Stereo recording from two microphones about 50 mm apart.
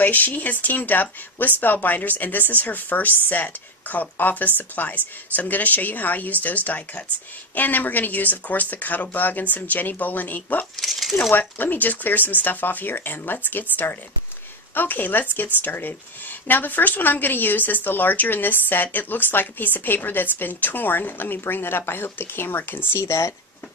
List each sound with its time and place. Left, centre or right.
0.0 s a woman's voice: left
10.8 s speech: centre
11.3 s a woman's voice: left
22.9 s speech: left